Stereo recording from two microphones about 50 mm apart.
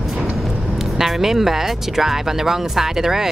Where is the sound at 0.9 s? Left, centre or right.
Centre.